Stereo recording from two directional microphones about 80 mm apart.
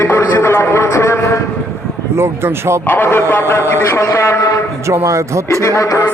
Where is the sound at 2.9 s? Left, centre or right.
Left.